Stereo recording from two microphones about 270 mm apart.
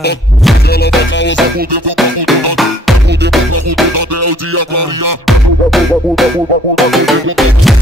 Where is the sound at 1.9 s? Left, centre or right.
Centre.